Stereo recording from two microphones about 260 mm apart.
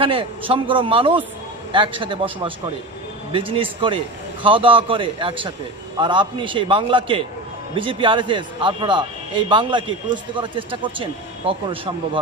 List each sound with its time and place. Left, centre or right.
0.0 s speech: centre